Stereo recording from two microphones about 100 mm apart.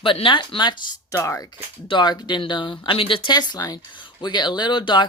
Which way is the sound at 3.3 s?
45° left (ahead or behind).